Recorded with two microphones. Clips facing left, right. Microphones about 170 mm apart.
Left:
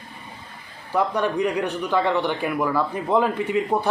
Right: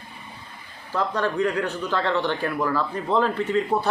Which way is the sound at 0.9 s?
15° left (ahead or behind).